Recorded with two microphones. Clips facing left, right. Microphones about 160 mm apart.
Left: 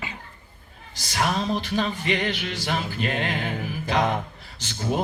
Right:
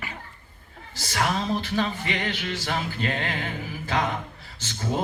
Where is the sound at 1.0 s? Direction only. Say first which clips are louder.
Left 1 dB; 15° left (ahead or behind).